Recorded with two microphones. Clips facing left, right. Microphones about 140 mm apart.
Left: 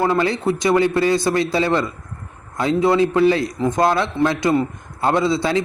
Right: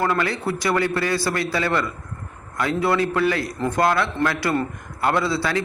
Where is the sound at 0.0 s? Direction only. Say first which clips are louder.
Left 4 dB; 25° left (ahead or behind).